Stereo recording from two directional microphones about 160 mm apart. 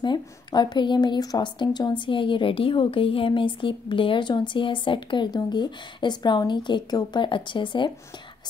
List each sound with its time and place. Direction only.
0.0 s a woman's voice: 25° left (ahead or behind)